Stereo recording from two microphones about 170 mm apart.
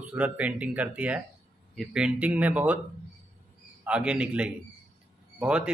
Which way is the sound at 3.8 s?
5° right (ahead or behind).